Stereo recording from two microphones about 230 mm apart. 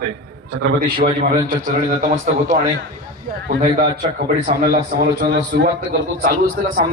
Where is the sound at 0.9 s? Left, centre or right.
Right.